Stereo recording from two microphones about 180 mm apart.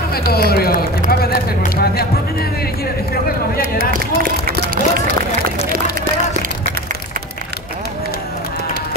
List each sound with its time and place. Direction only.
0.1 s speech: 60° left (ahead or behind)
3.7 s speech: 55° right (ahead or behind)